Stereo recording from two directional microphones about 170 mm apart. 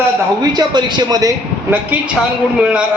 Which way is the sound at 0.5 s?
25° right (ahead or behind).